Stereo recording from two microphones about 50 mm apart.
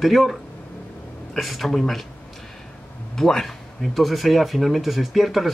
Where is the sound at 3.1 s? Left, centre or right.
Centre.